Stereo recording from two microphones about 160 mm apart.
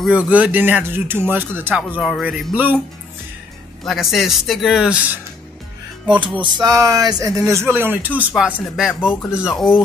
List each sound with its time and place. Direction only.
0.3 s speech: 10° right (ahead or behind)
3.8 s speech: centre (ahead or behind)
6.0 s music: 30° right (ahead or behind)
6.4 s speech: 25° right (ahead or behind); by 9.8 s centre (ahead or behind)